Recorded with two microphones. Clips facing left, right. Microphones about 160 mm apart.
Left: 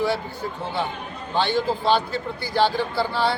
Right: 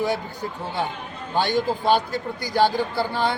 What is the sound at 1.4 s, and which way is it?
A man's voice, 15° right (ahead or behind).